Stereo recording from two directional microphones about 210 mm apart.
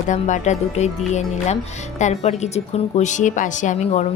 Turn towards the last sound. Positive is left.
turn(degrees=35)  # may be behind; listen again after turning